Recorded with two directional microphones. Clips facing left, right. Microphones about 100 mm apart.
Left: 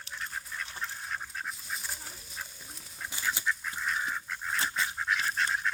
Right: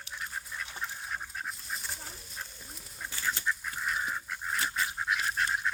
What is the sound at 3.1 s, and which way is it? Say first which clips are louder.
Goose: even; 10° left (ahead or behind).